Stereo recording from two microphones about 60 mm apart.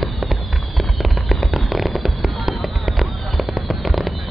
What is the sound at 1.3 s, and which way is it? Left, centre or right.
Fireworks, centre.